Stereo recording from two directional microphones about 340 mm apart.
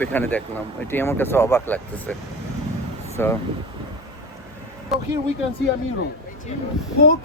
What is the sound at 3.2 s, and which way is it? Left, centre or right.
Speech, centre.